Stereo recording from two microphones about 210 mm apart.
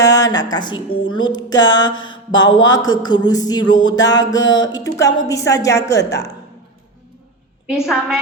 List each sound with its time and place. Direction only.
0.0 s a sound: 15° left (ahead or behind)
0.5 s speech: 20° left (ahead or behind)
2.0 s mantra: 20° left (ahead or behind)
2.6 s speech: 20° left (ahead or behind)
7.9 s a woman's voice: 5° right (ahead or behind)